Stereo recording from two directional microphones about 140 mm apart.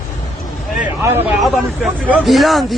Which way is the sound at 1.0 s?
15° right (ahead or behind).